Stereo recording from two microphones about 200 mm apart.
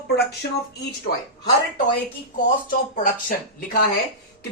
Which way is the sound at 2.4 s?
40° left (ahead or behind).